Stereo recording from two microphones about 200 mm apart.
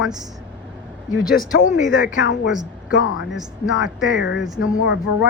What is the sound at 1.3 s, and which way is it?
Speech, 45° left (ahead or behind).